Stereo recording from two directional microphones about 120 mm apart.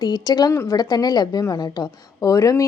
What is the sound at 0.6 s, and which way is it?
A woman's voice, 30° left (ahead or behind).